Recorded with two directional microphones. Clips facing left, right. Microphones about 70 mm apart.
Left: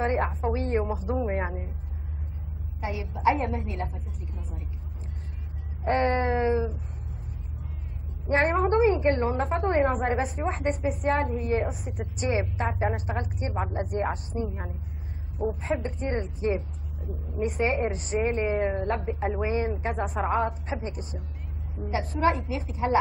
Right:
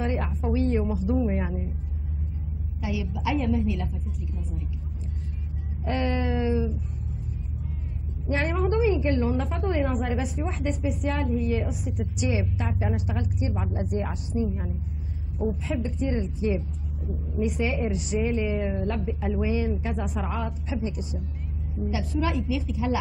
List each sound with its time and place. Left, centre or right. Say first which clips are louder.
0.0 s a woman's voice: left 3 dB; left
2.8 s a woman's voice: left 4 dB; left
5.9 s a woman's voice: left 3 dB; left
8.3 s a woman's voice: left 3 dB; left